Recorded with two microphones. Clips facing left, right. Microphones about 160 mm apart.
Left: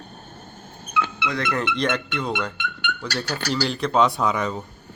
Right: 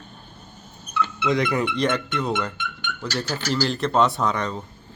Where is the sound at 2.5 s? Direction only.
65° left (ahead or behind).